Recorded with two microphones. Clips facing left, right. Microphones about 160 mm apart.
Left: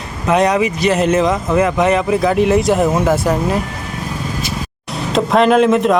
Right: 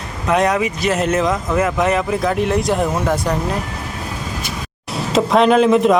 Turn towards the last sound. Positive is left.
turn(degrees=0)  # may be behind; listen again after turning